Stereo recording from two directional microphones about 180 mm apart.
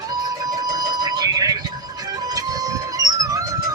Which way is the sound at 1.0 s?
20° right (ahead or behind).